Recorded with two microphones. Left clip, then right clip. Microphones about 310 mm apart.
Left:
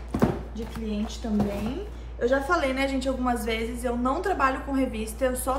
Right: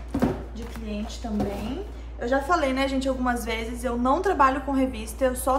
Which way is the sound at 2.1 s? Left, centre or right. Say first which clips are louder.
Even; centre.